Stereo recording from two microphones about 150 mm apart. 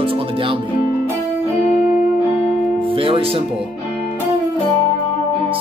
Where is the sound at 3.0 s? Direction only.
35° right (ahead or behind).